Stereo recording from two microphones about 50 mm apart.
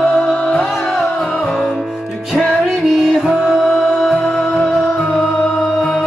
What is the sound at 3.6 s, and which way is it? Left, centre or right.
Music, centre.